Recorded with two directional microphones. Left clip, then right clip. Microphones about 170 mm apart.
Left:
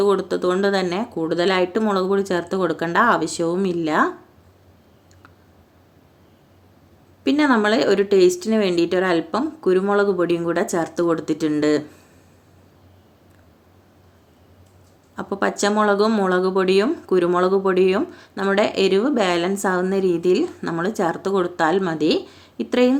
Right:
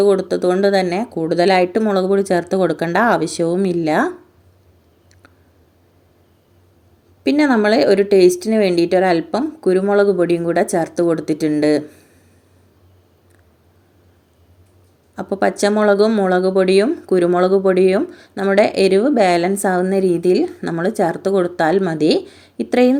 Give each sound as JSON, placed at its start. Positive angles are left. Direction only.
{"t": 0.0, "sound": "speech", "side_deg": -20}
{"t": 7.3, "sound": "speech", "side_deg": -20}
{"t": 15.1, "sound": "speech", "side_deg": -20}